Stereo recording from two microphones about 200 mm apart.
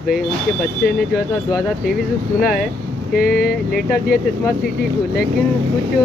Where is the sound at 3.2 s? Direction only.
50° left (ahead or behind).